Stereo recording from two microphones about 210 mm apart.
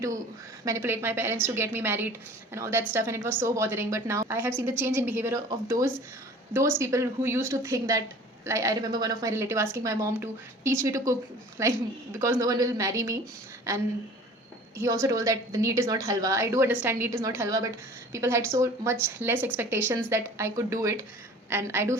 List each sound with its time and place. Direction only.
0.6 s a woman's voice: 15° right (ahead or behind)
14.8 s a woman's voice: 15° right (ahead or behind)